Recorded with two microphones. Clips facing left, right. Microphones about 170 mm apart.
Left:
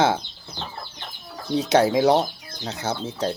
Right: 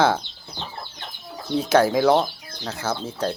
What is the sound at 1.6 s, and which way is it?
Speech, 20° left (ahead or behind).